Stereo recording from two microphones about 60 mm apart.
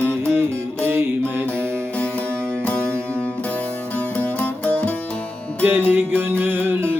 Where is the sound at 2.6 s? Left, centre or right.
Left.